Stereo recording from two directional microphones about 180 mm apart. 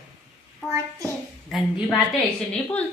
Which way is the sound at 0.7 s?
15° right (ahead or behind).